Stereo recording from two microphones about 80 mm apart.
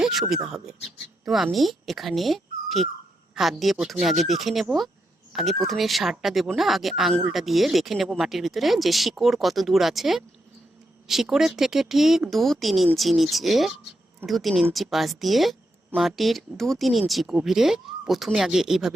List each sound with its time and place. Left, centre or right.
0.0 s a woman's voice: centre